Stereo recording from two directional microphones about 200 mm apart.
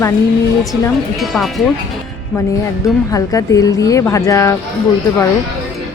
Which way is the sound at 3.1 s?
15° left (ahead or behind).